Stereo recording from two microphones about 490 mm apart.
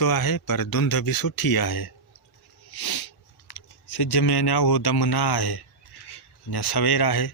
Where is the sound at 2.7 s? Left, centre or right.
Left.